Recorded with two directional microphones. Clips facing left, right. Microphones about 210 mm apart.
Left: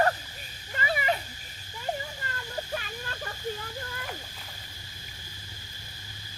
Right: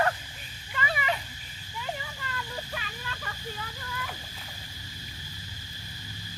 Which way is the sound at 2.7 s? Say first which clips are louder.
Left 3 dB; 45° left (ahead or behind).